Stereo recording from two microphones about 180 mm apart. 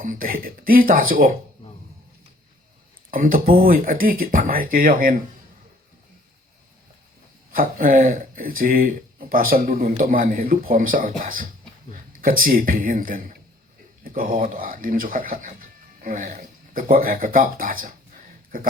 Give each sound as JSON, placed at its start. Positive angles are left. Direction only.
{"t": 0.0, "sound": "speech", "side_deg": -50}
{"t": 3.1, "sound": "speech", "side_deg": -50}
{"t": 7.5, "sound": "speech", "side_deg": -50}